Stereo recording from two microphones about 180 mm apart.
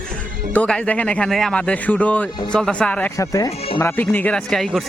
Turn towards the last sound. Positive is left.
turn(degrees=0)  # may be behind; listen again after turning